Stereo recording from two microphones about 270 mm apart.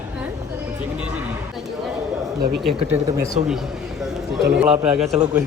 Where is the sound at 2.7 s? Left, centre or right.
Centre.